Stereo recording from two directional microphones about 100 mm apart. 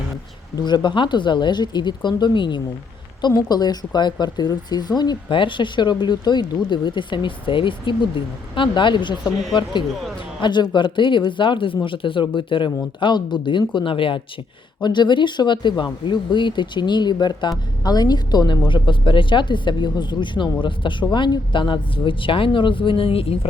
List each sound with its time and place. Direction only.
0.6 s speech: 45° left (ahead or behind)
10.4 s speech: 50° left (ahead or behind)
14.8 s speech: 50° left (ahead or behind)
18.9 s speech: 55° left (ahead or behind)